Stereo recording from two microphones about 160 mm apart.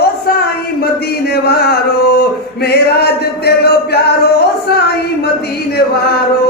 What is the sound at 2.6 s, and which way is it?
Music, 90° left.